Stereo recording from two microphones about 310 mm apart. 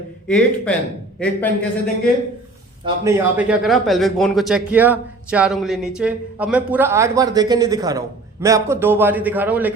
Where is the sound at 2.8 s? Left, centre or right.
Centre.